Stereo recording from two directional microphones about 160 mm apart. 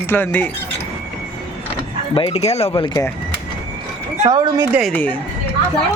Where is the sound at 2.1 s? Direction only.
35° left (ahead or behind).